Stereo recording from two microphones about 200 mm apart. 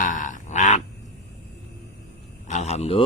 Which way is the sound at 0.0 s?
40° left (ahead or behind).